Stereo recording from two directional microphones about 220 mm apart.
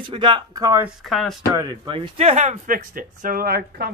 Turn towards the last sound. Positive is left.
turn(degrees=-45)  # may be behind; listen again after turning